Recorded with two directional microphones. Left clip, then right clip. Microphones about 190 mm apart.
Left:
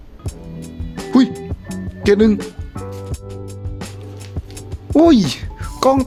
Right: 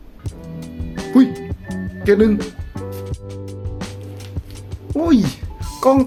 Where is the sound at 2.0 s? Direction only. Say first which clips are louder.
Left 1 dB; 55° left (ahead or behind).